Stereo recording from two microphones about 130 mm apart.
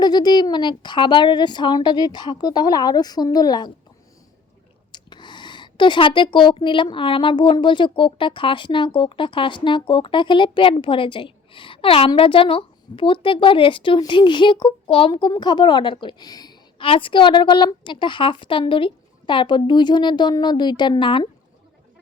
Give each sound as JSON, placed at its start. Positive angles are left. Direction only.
{"t": 0.0, "sound": "a woman's voice", "side_deg": 35}
{"t": 4.9, "sound": "a woman's voice", "side_deg": 35}